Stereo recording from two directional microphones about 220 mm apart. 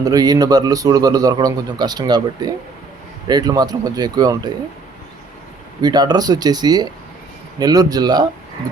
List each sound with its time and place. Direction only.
0.0 s a man's voice: 15° right (ahead or behind)
5.8 s a man's voice: 20° right (ahead or behind)